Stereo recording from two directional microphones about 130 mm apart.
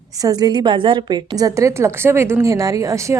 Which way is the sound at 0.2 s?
30° right (ahead or behind).